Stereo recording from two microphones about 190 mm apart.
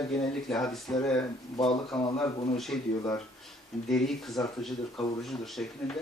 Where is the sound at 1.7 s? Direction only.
25° left (ahead or behind).